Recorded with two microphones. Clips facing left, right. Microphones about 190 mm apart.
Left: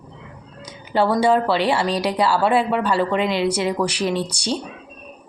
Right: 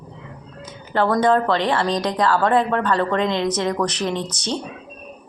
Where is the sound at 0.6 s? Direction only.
10° left (ahead or behind).